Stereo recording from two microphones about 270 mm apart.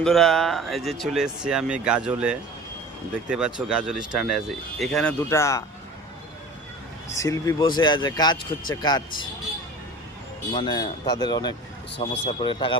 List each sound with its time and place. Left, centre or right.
0.0 s speech: centre
7.1 s speech: centre
10.5 s speech: centre